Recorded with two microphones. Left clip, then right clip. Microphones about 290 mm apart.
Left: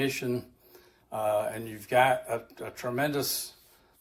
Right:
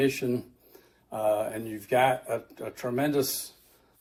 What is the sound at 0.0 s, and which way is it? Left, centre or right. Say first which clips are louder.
Speech: right 3 dB; centre.